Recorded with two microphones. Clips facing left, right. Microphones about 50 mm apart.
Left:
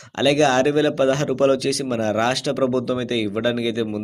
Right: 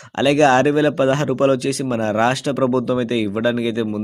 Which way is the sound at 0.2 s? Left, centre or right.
Right.